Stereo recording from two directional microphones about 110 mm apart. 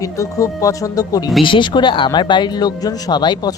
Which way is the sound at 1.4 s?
50° left (ahead or behind).